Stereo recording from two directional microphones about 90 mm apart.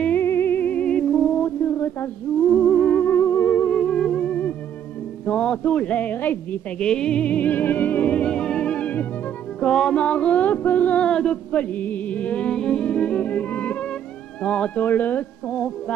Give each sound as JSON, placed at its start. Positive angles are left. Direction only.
{"t": 0.0, "sound": "music", "side_deg": 20}
{"t": 2.4, "sound": "theremin", "side_deg": 10}
{"t": 5.2, "sound": "a man's voice", "side_deg": 10}
{"t": 9.6, "sound": "music", "side_deg": 10}